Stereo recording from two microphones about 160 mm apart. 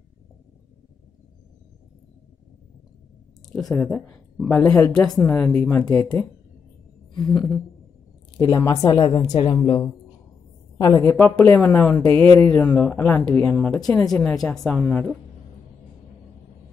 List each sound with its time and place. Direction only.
3.4 s a woman's voice: 5° left (ahead or behind)
8.4 s a woman's voice: 20° left (ahead or behind)
11.1 s a woman's voice: 10° left (ahead or behind)